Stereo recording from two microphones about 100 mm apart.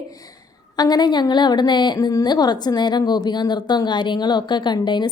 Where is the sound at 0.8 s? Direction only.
40° left (ahead or behind).